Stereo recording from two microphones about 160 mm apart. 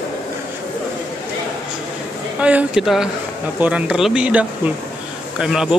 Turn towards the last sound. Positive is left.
turn(degrees=-5)  # may be behind; listen again after turning